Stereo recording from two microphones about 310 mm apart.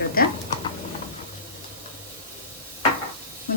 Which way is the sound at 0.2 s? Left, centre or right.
Left.